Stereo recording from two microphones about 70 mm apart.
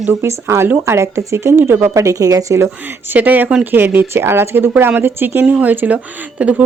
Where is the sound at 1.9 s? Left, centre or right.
Right.